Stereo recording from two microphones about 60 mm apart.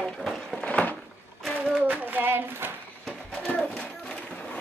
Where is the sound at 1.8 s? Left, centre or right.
Right.